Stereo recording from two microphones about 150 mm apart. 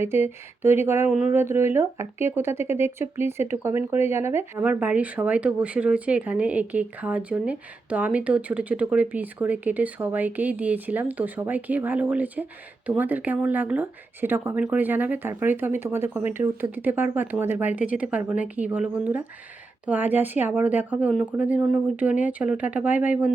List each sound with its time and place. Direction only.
0.0 s speech: 15° right (ahead or behind)